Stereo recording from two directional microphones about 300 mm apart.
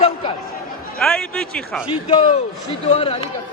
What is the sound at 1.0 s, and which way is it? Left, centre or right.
Speech, centre.